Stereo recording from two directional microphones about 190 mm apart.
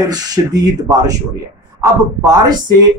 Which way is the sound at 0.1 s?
20° right (ahead or behind).